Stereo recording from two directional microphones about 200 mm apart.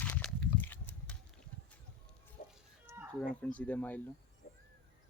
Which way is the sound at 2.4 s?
40° left (ahead or behind).